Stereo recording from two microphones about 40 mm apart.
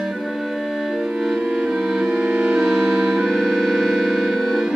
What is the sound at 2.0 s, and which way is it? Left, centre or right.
Music, right.